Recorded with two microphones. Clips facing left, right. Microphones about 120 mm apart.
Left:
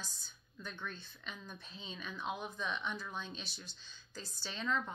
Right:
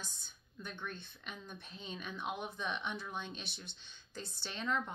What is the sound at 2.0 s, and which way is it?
Speech, 15° right (ahead or behind).